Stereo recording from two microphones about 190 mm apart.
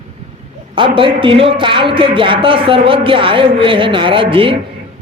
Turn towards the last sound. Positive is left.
turn(degrees=-25)  # may be behind; listen again after turning